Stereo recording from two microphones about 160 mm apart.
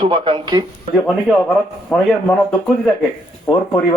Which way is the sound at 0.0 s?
30° right (ahead or behind).